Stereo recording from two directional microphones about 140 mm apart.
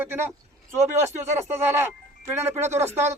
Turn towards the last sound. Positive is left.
turn(degrees=-15)  # may be behind; listen again after turning